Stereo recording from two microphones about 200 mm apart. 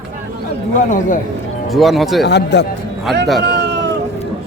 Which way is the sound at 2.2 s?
60° left (ahead or behind).